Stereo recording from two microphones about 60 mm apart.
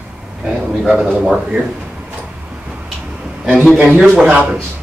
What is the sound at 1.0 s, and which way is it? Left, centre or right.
Speech, right.